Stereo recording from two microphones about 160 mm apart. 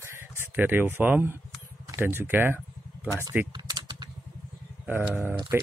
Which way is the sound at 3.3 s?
25° right (ahead or behind).